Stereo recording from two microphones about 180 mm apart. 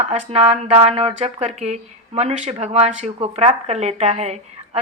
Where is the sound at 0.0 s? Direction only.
40° right (ahead or behind).